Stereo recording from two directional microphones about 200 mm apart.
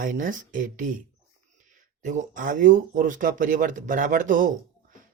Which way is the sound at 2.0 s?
40° right (ahead or behind).